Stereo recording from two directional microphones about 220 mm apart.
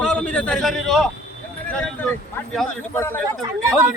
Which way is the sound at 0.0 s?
5° left (ahead or behind).